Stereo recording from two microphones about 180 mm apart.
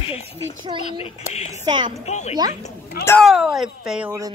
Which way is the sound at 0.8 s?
35° left (ahead or behind).